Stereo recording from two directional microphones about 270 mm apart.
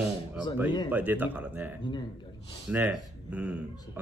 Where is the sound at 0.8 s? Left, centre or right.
Centre.